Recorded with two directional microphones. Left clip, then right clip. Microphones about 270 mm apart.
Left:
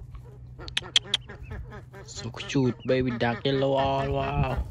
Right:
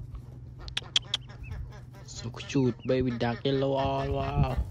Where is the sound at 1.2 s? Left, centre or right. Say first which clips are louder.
Left 5 dB; centre.